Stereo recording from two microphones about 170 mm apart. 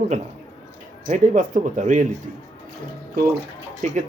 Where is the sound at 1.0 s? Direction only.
45° right (ahead or behind).